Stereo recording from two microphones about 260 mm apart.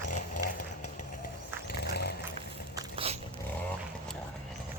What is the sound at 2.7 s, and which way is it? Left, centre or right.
Biting, right.